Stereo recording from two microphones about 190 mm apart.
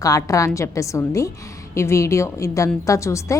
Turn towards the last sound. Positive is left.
turn(degrees=15)  # may be behind; listen again after turning